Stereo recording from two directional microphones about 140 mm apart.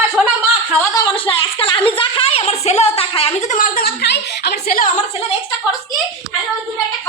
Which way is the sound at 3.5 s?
85° left.